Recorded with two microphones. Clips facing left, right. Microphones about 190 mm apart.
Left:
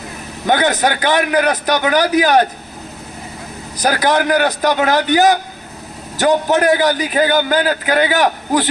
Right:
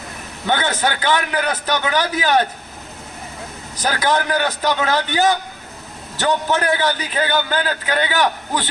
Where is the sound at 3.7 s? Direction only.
40° left (ahead or behind).